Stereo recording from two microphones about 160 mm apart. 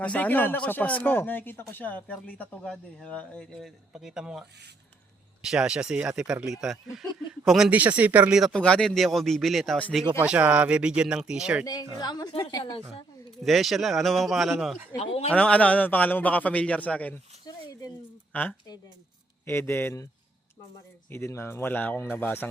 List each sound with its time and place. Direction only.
0.0 s speech: 10° left (ahead or behind)
10.2 s speech: 10° right (ahead or behind)
11.6 s a woman's voice: 25° left (ahead or behind)
13.4 s speech: centre (ahead or behind)
15.0 s speech: 40° left (ahead or behind)
15.3 s speech: 10° left (ahead or behind)
17.4 s a sound: 25° left (ahead or behind)
18.3 s speech: 10° left (ahead or behind)
21.1 s speech: 15° left (ahead or behind)